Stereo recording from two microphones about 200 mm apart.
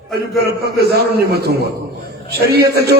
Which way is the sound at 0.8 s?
50° right (ahead or behind).